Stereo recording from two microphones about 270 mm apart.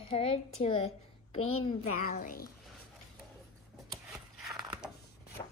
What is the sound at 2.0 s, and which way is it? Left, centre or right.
Speech, left.